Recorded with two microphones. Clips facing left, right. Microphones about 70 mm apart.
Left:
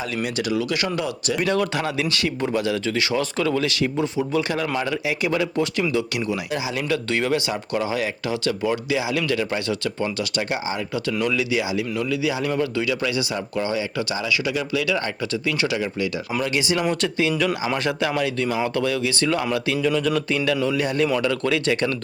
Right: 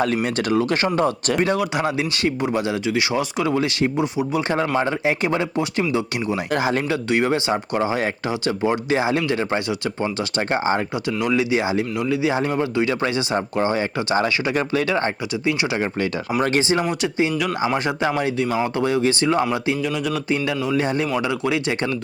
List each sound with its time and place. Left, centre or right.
0.2 s speech: right
1.7 s speech: right
4.4 s speech: right
6.5 s speech: right
6.8 s speech: right
11.2 s speech: right
16.9 s speech: right
19.8 s a sound: centre
20.3 s speech: right